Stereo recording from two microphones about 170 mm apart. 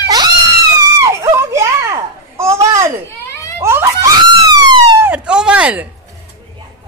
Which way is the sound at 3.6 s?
15° right (ahead or behind).